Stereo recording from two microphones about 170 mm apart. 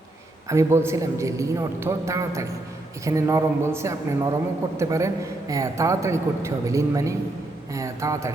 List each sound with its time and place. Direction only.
0.4 s a man's voice: 15° right (ahead or behind)